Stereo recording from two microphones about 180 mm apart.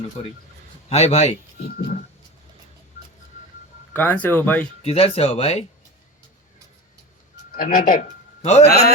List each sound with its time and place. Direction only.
0.2 s speech: 35° left (ahead or behind)
1.6 s speech: 50° left (ahead or behind)
3.9 s speech: 10° left (ahead or behind)
4.8 s speech: 35° left (ahead or behind)
7.5 s a man's voice: 50° left (ahead or behind)